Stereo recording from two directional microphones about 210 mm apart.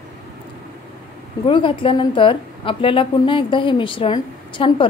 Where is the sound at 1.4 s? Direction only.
25° left (ahead or behind).